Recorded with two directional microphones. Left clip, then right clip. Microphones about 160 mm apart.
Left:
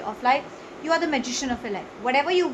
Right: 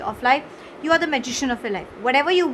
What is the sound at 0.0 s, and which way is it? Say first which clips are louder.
A woman's voice: right 3 dB; 50° right (ahead or behind).